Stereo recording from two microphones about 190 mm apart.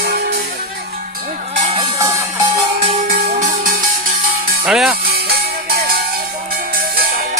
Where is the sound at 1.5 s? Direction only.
35° right (ahead or behind).